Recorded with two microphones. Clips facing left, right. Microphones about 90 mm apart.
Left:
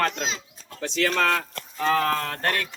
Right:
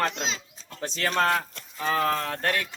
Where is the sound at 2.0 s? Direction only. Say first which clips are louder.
Left 1 dB; 5° right (ahead or behind).